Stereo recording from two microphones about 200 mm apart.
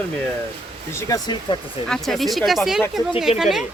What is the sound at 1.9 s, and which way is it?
Speech, centre (ahead or behind).